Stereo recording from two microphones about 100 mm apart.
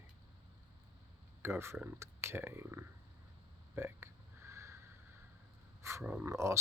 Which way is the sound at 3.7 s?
25° right (ahead or behind).